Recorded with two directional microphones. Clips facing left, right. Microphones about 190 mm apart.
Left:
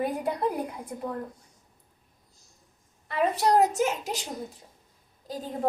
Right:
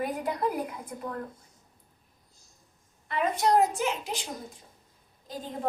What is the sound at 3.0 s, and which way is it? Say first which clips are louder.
A woman's voice: left 2 dB; 35° left (ahead or behind).